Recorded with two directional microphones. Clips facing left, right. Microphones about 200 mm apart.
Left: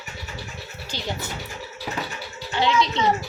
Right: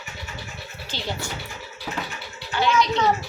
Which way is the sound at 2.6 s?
25° left (ahead or behind).